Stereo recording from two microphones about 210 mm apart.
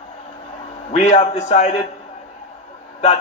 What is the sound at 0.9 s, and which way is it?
Speech, 30° left (ahead or behind).